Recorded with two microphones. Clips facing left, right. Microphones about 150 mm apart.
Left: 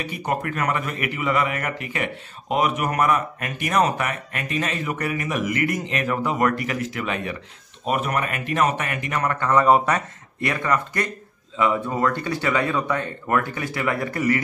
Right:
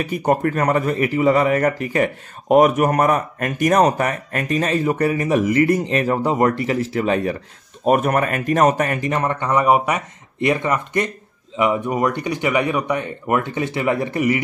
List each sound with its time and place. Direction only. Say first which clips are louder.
0.0 s a man's voice: right 8 dB; 45° right (ahead or behind); by 14.4 s 20° right (ahead or behind)